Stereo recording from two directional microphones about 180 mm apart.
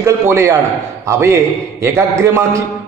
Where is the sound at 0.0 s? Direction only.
15° right (ahead or behind).